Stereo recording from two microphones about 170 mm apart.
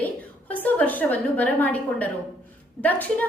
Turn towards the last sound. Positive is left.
turn(degrees=10)  # may be behind; listen again after turning